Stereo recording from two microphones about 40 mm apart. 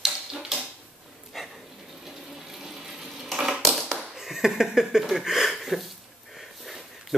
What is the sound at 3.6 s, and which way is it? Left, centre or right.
Tap, centre.